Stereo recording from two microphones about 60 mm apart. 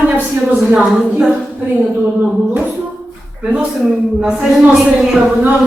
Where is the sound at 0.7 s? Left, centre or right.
Centre.